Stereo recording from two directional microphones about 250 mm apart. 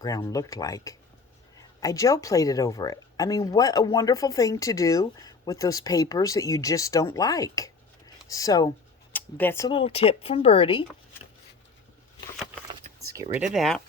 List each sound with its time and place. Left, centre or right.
0.0 s speech: centre
12.9 s a sound: right
13.3 s speech: centre